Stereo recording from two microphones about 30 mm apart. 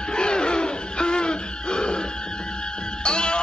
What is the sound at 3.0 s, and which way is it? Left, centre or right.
Music, left.